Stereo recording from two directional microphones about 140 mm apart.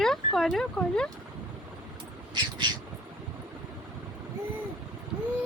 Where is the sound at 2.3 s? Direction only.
30° right (ahead or behind).